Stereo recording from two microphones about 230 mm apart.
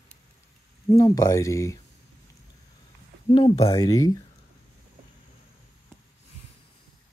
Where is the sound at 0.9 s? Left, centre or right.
Centre.